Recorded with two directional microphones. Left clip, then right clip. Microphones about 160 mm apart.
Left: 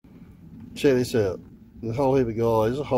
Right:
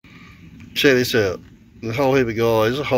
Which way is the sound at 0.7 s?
Centre (ahead or behind).